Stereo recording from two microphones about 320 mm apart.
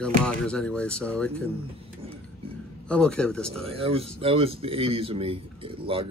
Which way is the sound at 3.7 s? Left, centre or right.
Centre.